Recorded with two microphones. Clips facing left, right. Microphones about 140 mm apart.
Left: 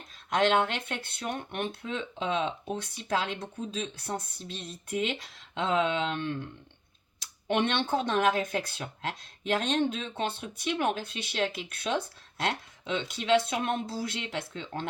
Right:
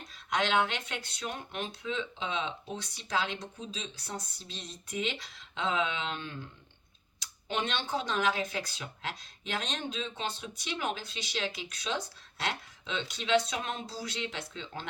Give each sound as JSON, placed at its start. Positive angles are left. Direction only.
{"t": 0.3, "sound": "speech", "side_deg": 50}